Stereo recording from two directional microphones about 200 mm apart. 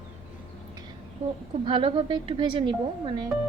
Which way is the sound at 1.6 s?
25° right (ahead or behind).